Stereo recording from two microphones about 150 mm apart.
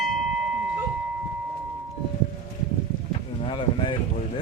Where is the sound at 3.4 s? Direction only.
35° left (ahead or behind).